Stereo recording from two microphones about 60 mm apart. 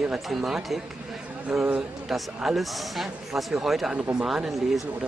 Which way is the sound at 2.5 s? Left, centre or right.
Centre.